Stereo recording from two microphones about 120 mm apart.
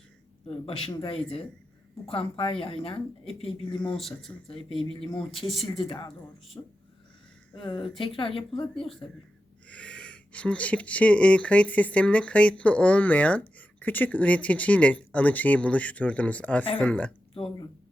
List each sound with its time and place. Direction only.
0.4 s speech: 55° left (ahead or behind)
3.9 s speech: centre (ahead or behind)
4.4 s speech: 50° left (ahead or behind)
6.5 s speech: 25° left (ahead or behind)
7.5 s speech: 45° left (ahead or behind)
9.6 s speech: 10° left (ahead or behind)